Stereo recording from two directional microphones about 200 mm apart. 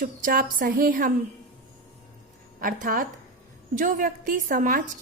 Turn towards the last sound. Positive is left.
turn(degrees=-45)  # may be behind; listen again after turning